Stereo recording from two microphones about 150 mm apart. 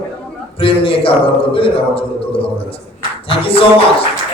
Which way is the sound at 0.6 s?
35° left (ahead or behind).